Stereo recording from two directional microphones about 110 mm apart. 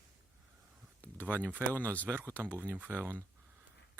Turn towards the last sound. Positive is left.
turn(degrees=-20)  # may be behind; listen again after turning